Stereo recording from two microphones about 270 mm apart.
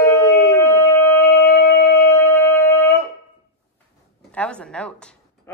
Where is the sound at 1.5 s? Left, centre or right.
Left.